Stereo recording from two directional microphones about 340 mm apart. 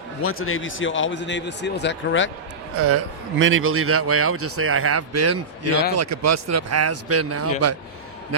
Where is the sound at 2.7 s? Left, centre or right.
Right.